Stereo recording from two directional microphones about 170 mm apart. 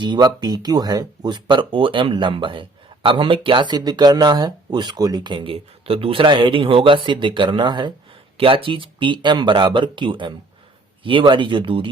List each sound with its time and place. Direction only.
0.0 s speech: 25° right (ahead or behind)